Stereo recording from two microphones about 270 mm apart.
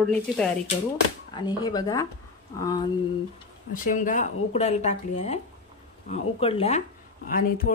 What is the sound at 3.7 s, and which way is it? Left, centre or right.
Speech, left.